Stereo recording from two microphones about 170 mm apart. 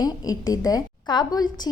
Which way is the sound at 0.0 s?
20° left (ahead or behind).